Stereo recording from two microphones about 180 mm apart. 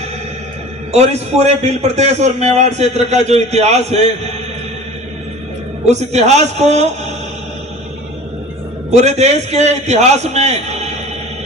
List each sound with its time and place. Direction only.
0.9 s a man's voice: 40° right (ahead or behind)
5.9 s a man's voice: 40° right (ahead or behind)
8.9 s a man's voice: 40° right (ahead or behind)